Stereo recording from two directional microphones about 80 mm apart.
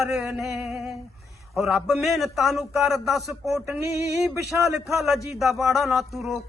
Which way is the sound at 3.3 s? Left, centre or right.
Right.